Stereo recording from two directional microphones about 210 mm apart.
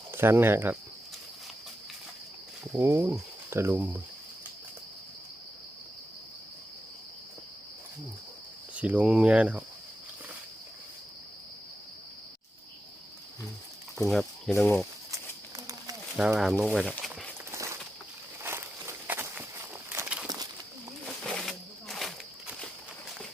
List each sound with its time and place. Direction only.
0.1 s speech: 10° right (ahead or behind)
2.7 s cricket: 10° right (ahead or behind)
8.7 s speech: 5° right (ahead or behind)
14.1 s speech: centre (ahead or behind)
15.1 s a sound: 15° right (ahead or behind)
16.1 s speech: 5° right (ahead or behind)
16.9 s a sound: 5° left (ahead or behind)
17.5 s walk: 15° right (ahead or behind)
21.2 s a sound: centre (ahead or behind)